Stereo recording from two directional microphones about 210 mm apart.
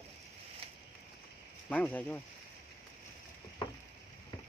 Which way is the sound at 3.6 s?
25° left (ahead or behind).